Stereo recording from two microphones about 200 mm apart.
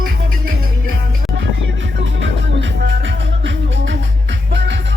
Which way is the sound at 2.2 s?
65° right (ahead or behind).